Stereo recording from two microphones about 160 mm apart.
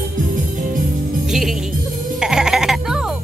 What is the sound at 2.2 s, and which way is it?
Sheep, 5° right (ahead or behind).